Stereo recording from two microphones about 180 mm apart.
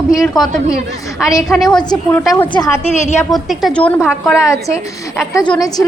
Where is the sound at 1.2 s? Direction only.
20° left (ahead or behind).